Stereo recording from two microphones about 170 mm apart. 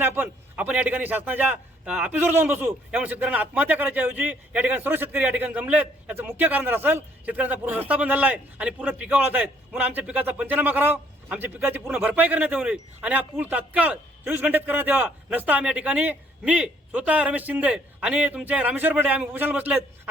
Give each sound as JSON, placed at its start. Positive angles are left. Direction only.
{"t": 0.0, "sound": "a man's voice", "side_deg": -10}